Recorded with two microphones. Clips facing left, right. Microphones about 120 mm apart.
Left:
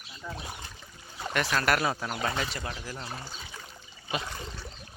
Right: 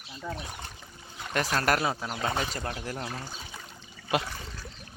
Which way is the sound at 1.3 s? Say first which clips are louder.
Even; 30° right (ahead or behind).